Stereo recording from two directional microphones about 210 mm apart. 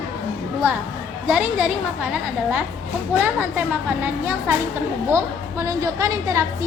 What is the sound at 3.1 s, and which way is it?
Speech, 5° right (ahead or behind).